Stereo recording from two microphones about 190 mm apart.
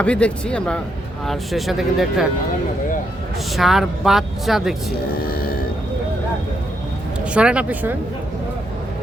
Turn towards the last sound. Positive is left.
turn(degrees=-5)  # may be behind; listen again after turning